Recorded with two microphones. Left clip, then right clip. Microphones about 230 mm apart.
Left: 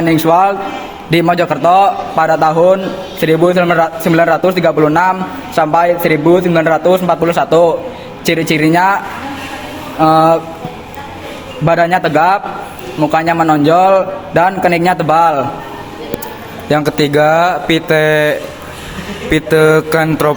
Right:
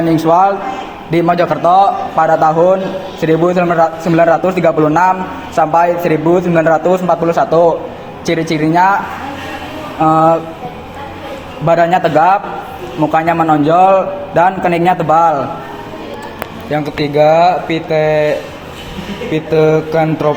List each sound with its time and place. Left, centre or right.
0.2 s a man's voice: left
10.0 s a man's voice: left
11.6 s a man's voice: left
16.6 s speech: left